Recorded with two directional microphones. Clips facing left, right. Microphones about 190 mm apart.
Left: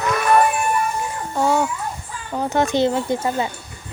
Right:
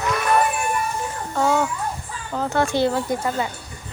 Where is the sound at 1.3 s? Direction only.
10° left (ahead or behind).